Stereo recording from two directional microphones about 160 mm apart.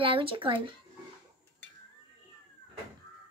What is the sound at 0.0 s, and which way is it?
Speech, 35° right (ahead or behind).